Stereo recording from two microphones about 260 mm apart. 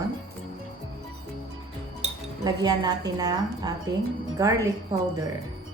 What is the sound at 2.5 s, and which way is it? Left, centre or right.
A woman's voice, centre.